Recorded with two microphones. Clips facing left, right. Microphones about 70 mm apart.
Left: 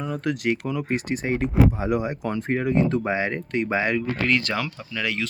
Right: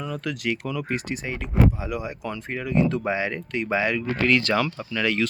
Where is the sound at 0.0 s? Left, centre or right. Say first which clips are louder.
Left 3 dB; left.